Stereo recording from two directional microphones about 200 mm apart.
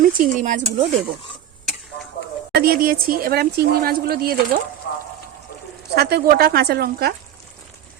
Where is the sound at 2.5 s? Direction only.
50° right (ahead or behind).